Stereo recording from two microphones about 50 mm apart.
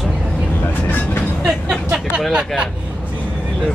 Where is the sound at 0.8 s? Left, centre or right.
Left.